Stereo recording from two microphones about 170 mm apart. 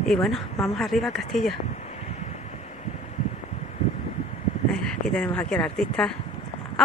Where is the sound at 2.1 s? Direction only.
40° left (ahead or behind).